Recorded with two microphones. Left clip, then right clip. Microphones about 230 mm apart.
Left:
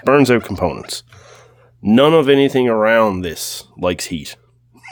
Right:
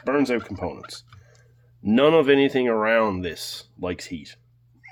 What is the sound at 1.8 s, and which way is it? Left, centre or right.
Speech, left.